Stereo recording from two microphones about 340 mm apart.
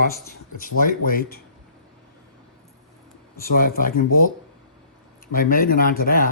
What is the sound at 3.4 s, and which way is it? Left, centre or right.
Speech, left.